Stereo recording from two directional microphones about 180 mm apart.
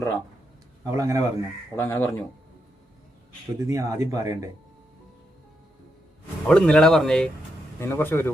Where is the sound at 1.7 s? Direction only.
15° left (ahead or behind).